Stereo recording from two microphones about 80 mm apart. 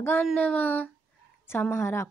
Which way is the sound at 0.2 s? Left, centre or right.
Centre.